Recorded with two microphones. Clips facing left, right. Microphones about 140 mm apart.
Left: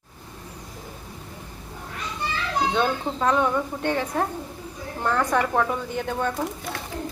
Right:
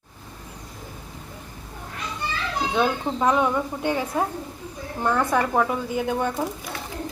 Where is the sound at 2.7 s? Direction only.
10° right (ahead or behind).